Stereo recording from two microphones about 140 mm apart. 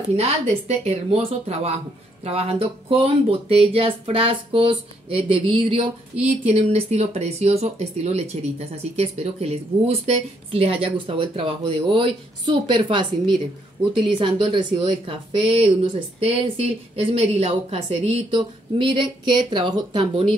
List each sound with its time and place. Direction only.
0.1 s speech: 50° right (ahead or behind)
14.1 s speech: 35° right (ahead or behind)